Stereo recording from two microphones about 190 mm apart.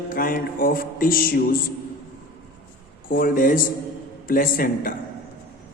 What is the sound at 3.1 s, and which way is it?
Speech, 50° left (ahead or behind).